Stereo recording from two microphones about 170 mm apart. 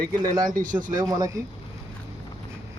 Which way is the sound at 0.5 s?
50° right (ahead or behind).